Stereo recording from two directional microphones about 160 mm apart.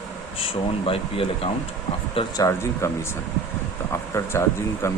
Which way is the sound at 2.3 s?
20° left (ahead or behind).